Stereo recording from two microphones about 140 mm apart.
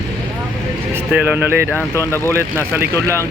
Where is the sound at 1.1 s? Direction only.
15° right (ahead or behind).